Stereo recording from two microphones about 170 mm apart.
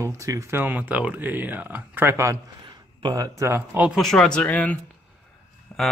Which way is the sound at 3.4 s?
15° right (ahead or behind).